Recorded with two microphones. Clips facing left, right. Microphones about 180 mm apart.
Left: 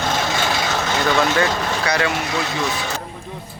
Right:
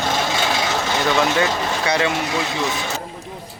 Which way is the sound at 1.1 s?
20° right (ahead or behind).